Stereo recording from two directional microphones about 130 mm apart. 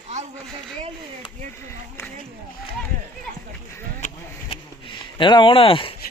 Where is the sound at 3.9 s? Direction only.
60° left (ahead or behind).